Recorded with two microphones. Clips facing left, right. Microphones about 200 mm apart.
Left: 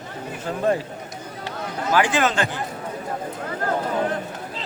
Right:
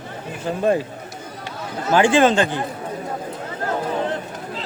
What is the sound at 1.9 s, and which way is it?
Speech, 25° right (ahead or behind).